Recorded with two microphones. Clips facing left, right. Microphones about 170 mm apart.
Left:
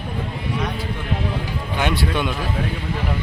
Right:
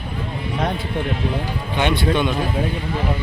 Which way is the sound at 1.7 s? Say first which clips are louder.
Right 3 dB; 5° left (ahead or behind).